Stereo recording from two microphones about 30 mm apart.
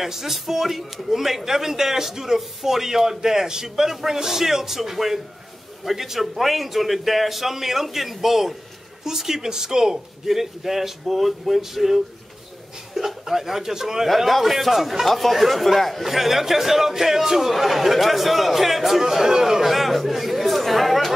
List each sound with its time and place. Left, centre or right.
0.0 s a man's voice: centre
14.0 s a man's voice: centre
16.0 s a man's voice: centre
17.5 s speech: centre